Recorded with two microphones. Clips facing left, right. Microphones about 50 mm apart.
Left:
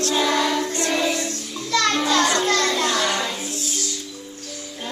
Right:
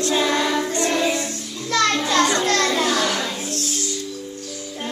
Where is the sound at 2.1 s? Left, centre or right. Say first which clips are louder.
Right 1 dB; centre.